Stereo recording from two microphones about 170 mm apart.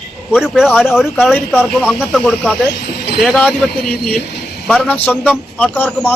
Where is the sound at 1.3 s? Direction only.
10° left (ahead or behind).